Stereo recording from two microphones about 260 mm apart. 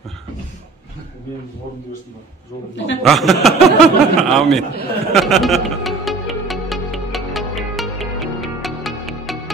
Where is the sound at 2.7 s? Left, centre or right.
Left.